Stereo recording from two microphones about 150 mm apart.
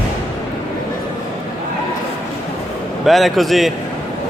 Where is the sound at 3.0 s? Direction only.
Centre (ahead or behind).